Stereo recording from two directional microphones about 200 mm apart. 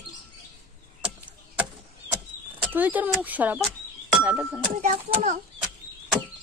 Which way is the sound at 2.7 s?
10° right (ahead or behind).